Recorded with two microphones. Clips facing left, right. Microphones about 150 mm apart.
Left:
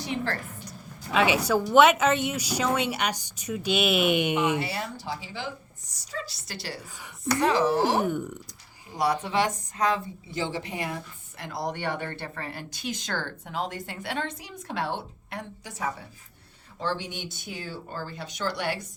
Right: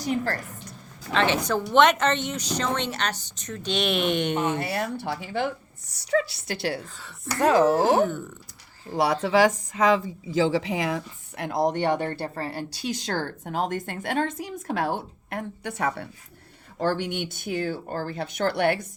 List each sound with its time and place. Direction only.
0.0 s a woman's voice: 40° right (ahead or behind)
1.1 s a woman's voice: 10° left (ahead or behind)
4.6 s speech: 55° right (ahead or behind)
8.0 s a woman's voice: 15° left (ahead or behind)
9.2 s a woman's voice: 90° right
11.4 s speech: 50° right (ahead or behind); by 16.0 s 70° right (ahead or behind)
16.8 s speech: 55° right (ahead or behind)